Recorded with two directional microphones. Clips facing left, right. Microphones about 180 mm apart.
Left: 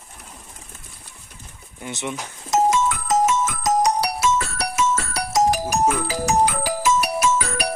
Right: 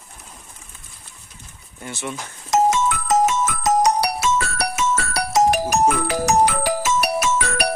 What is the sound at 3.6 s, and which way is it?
Music, 65° right (ahead or behind).